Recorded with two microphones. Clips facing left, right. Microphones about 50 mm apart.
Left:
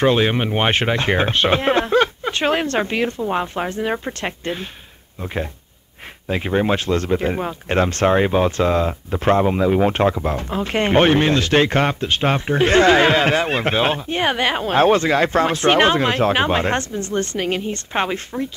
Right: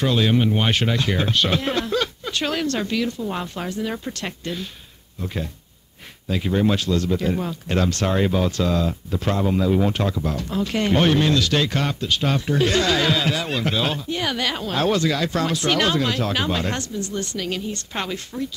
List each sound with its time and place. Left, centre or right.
0.0 s speech: left